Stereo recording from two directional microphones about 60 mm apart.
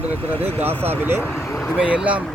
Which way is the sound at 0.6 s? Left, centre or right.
Right.